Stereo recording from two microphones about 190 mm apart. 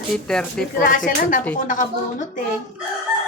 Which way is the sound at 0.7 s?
45° left (ahead or behind).